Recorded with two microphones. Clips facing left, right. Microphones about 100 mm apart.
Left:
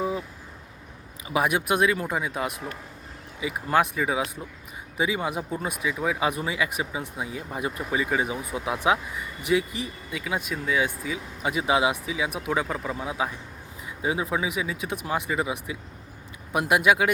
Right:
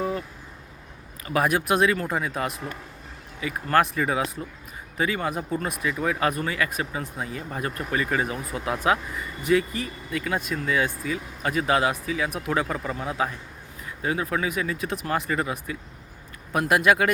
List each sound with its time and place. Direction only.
0.0 s vehicle: 10° left (ahead or behind)
1.3 s speech: 5° left (ahead or behind)